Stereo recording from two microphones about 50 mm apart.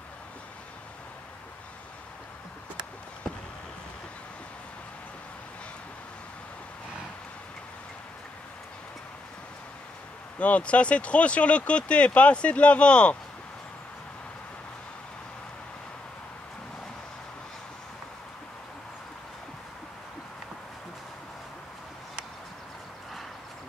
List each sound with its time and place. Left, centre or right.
10.4 s speech: left